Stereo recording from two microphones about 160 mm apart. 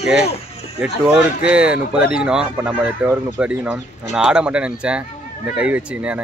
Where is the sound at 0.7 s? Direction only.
5° right (ahead or behind).